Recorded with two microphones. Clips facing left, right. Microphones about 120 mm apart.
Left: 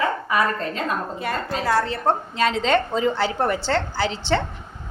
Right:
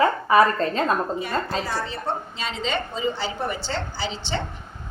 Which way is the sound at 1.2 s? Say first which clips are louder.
Left 1 dB; 60° left (ahead or behind).